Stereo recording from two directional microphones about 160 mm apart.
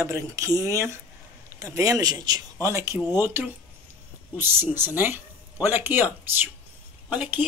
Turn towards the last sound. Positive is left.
turn(degrees=-10)  # may be behind; listen again after turning